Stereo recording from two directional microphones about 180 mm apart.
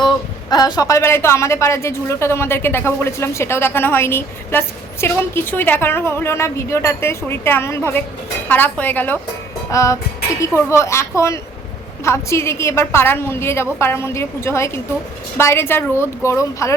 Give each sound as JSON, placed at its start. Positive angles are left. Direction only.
{"t": 0.5, "sound": "a woman's voice", "side_deg": 20}